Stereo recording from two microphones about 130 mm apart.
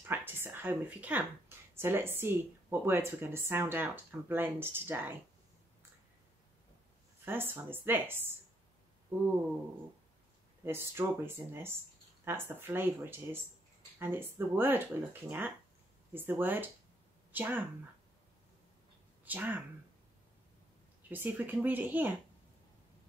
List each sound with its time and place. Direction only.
0.1 s a woman's voice: 20° right (ahead or behind)
7.2 s speech: 15° right (ahead or behind)
10.6 s speech: 20° right (ahead or behind)
19.2 s speech: 15° right (ahead or behind)
21.1 s speech: 15° right (ahead or behind)